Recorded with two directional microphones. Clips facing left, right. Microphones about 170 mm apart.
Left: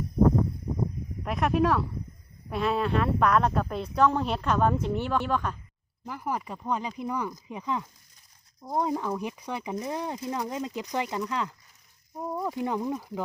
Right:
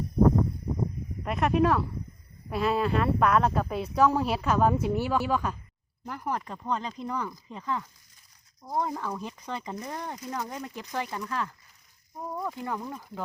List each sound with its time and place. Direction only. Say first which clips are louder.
1.2 s a woman's voice: right 1 dB; centre (ahead or behind)
6.1 s speech: even; 5° left (ahead or behind)
12.9 s speech: left 6 dB; 5° left (ahead or behind)